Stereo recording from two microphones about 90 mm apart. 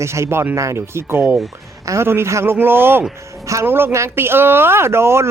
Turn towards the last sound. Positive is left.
turn(degrees=-30)  # may be behind; listen again after turning